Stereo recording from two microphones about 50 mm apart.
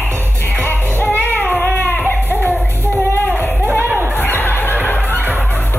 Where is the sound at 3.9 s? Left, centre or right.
Right.